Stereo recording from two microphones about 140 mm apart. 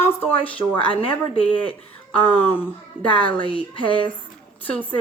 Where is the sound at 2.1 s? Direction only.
10° left (ahead or behind).